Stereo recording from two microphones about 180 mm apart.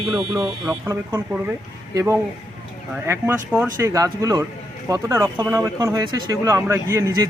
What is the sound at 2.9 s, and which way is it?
Speech, 10° right (ahead or behind).